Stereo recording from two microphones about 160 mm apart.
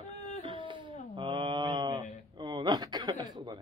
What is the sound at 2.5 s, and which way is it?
Speech, 25° right (ahead or behind).